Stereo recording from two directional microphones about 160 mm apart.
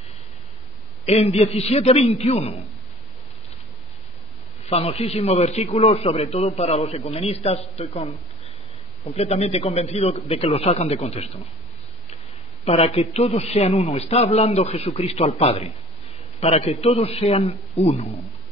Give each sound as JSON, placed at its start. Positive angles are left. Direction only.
{"t": 1.0, "sound": "a man's voice", "side_deg": 40}
{"t": 4.6, "sound": "a man's voice", "side_deg": 40}
{"t": 12.6, "sound": "a man's voice", "side_deg": 40}